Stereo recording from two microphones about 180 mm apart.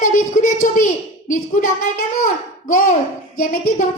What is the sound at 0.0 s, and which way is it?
A woman's voice, 45° left (ahead or behind).